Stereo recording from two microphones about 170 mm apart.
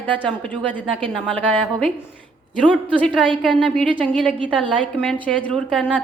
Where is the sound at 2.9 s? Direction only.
5° left (ahead or behind).